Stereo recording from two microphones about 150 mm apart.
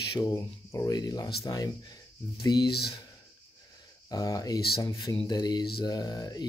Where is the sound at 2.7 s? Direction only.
90° left.